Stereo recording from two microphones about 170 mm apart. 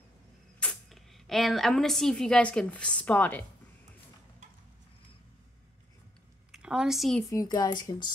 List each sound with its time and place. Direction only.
0.6 s speech: 5° left (ahead or behind)
6.5 s a woman's voice: 5° right (ahead or behind)
7.2 s speech: 20° left (ahead or behind)